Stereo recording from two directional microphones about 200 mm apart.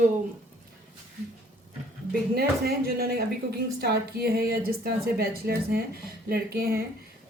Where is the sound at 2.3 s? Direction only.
50° right (ahead or behind).